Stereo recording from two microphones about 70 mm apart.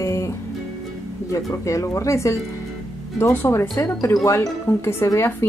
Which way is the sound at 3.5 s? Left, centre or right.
Left.